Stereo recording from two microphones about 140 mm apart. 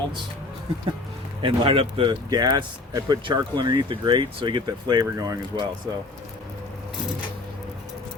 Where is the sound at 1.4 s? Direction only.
40° right (ahead or behind).